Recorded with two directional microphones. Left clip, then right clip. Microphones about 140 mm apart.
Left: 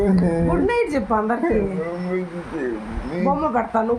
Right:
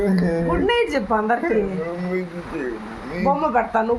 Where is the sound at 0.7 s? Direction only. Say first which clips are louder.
Right 1 dB; 15° right (ahead or behind).